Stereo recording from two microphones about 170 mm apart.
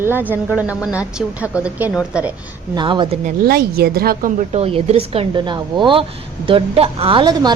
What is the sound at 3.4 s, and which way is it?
Speech, 65° right (ahead or behind).